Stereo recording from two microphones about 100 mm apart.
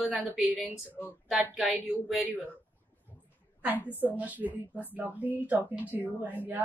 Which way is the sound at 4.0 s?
15° right (ahead or behind).